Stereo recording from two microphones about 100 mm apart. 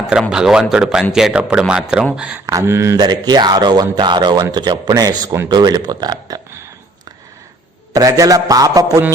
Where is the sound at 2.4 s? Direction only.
30° right (ahead or behind).